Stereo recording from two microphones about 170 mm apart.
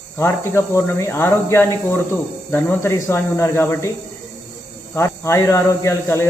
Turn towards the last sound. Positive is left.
turn(degrees=15)  # may be behind; listen again after turning